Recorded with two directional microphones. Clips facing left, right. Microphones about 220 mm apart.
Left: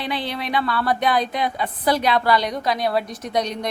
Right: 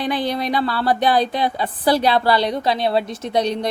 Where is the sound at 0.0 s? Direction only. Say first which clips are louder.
Right 5 dB; 45° right (ahead or behind).